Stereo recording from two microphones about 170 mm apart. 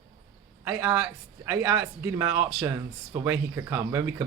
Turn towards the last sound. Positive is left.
turn(degrees=-15)  # may be behind; listen again after turning